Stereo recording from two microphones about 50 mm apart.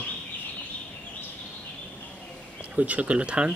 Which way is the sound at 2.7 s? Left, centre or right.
Right.